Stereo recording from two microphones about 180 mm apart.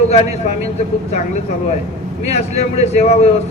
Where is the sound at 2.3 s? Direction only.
35° left (ahead or behind).